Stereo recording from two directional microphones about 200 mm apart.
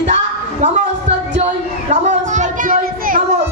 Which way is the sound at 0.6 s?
35° right (ahead or behind).